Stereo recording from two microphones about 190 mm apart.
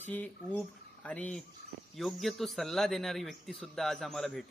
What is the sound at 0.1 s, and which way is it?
Speech, 10° left (ahead or behind).